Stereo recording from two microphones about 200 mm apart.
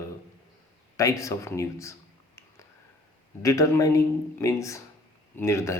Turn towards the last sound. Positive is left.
turn(degrees=15)  # may be behind; listen again after turning